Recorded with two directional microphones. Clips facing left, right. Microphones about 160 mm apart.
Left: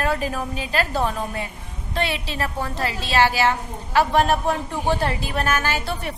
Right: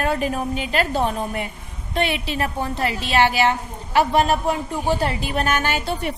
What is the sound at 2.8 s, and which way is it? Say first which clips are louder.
Speech: right 3 dB; 35° left (ahead or behind).